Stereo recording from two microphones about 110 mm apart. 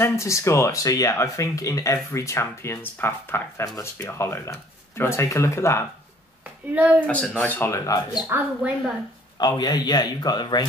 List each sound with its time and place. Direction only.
0.0 s speech: 25° left (ahead or behind)
6.7 s speech: 15° right (ahead or behind)
7.1 s speech: 15° left (ahead or behind); by 8.2 s 30° left (ahead or behind)
8.3 s speech: 15° right (ahead or behind)
9.4 s a man's voice: 35° left (ahead or behind)